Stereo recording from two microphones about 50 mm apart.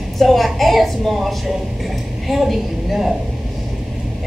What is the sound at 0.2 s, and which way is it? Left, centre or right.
A woman's voice, centre.